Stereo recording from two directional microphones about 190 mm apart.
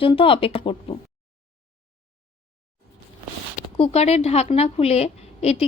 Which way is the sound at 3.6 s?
30° left (ahead or behind).